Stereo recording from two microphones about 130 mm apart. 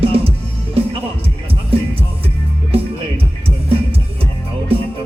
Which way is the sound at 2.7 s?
45° right (ahead or behind).